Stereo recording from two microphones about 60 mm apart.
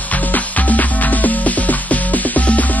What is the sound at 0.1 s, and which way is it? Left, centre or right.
Music, left.